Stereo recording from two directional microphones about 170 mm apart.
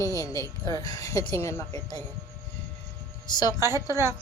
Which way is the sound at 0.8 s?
20° left (ahead or behind).